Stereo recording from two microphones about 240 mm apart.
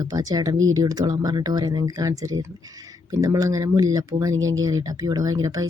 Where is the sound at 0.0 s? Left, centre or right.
Centre.